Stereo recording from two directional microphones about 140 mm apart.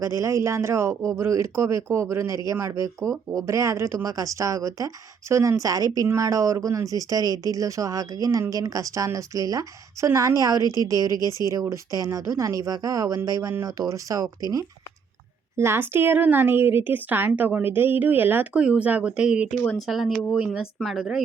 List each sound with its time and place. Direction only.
0.0 s speech: 20° right (ahead or behind)
11.2 s speech: 25° left (ahead or behind)
11.4 s a woman's voice: 20° right (ahead or behind); by 21.2 s 5° right (ahead or behind)